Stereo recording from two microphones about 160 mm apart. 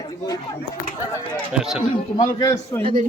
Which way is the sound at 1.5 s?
Centre (ahead or behind).